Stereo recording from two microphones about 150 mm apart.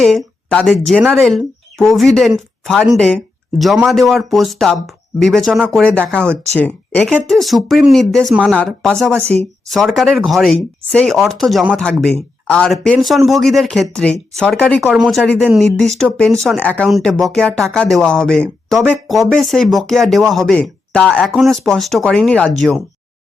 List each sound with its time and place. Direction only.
0.0 s speech: centre (ahead or behind)
6.1 s speech: 15° right (ahead or behind)
6.6 s speech: 10° left (ahead or behind)
9.2 s speech: 45° right (ahead or behind)
9.6 s speech: centre (ahead or behind)
14.8 s speech: 5° right (ahead or behind)